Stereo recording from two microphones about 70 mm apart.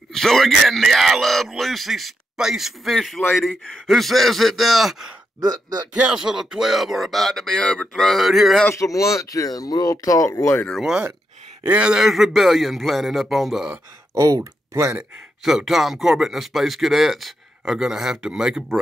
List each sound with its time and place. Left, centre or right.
0.1 s speech: centre
6.1 s speech: centre
8.7 s speech: left
10.8 s speech: centre
11.6 s speech: right
11.9 s speech: centre
14.1 s speech: right
15.4 s speech: centre